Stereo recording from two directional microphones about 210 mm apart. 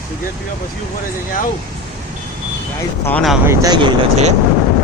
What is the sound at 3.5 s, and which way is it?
Speech, 15° right (ahead or behind).